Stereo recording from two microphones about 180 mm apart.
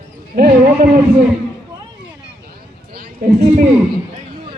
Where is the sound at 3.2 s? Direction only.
50° right (ahead or behind).